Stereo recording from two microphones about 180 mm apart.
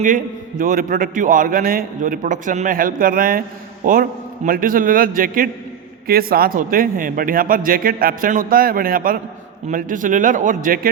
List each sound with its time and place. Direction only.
0.0 s a man's voice: 50° right (ahead or behind)